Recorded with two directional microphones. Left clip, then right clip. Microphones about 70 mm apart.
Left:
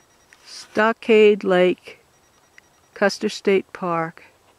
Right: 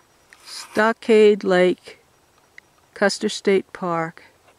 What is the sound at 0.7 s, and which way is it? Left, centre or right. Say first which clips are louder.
Speech: even; right.